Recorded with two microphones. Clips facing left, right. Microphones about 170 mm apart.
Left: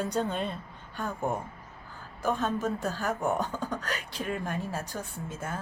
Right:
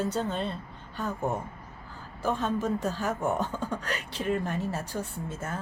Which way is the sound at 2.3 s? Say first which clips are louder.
Right 1 dB; 10° left (ahead or behind).